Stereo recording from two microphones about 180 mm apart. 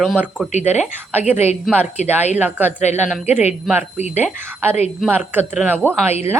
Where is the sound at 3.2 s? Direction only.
40° left (ahead or behind).